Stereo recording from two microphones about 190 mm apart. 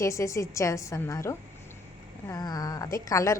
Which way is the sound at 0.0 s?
15° left (ahead or behind).